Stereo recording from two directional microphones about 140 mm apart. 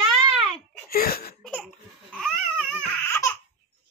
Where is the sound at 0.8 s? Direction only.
90° left.